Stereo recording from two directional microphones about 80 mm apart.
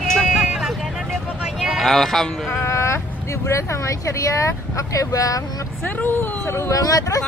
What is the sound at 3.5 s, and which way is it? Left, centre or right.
Speech, left.